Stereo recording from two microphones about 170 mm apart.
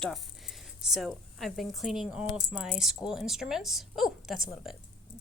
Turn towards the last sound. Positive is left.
turn(degrees=0)  # may be behind; listen again after turning